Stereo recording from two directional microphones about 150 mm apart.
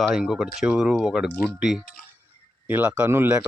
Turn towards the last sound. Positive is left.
turn(degrees=-15)  # may be behind; listen again after turning